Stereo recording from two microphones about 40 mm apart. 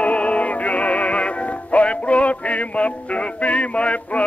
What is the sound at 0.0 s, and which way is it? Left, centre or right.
Music, left.